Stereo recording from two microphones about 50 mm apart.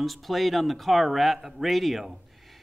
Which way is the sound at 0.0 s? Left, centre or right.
Centre.